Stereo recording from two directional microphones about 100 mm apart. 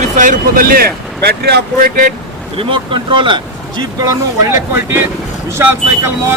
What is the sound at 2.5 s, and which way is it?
Speech, 60° right (ahead or behind).